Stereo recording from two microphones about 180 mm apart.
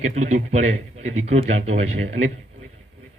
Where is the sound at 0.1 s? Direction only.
40° right (ahead or behind).